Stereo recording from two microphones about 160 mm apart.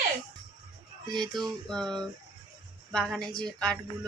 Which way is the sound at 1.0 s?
Centre (ahead or behind).